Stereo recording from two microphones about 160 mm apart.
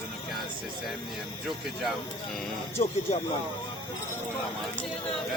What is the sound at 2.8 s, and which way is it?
Speech, 35° left (ahead or behind).